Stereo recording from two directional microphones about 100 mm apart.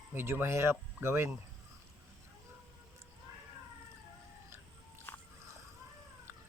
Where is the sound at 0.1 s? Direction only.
25° right (ahead or behind).